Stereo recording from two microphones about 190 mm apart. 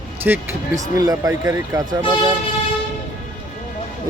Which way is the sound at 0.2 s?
10° right (ahead or behind).